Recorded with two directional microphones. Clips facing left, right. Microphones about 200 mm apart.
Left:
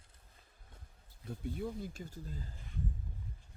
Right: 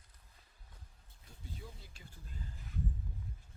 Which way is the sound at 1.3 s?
55° left (ahead or behind).